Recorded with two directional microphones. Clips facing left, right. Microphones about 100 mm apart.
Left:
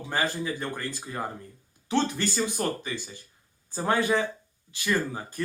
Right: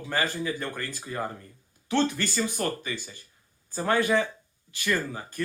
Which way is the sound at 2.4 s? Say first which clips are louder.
Right 1 dB; 15° left (ahead or behind).